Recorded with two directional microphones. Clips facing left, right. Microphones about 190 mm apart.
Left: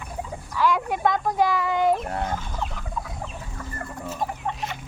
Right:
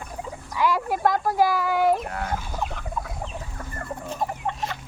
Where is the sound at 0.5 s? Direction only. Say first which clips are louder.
Even; 10° right (ahead or behind).